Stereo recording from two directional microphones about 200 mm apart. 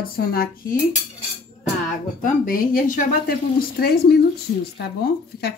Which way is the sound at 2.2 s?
40° left (ahead or behind).